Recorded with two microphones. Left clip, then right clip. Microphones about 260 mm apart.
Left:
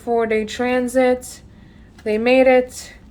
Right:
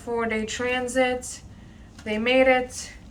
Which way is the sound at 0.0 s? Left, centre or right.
Left.